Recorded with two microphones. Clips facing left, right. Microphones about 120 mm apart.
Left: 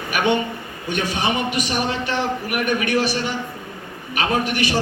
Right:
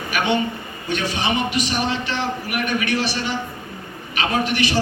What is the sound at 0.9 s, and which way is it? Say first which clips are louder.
A woman's voice: even; 50° left (ahead or behind).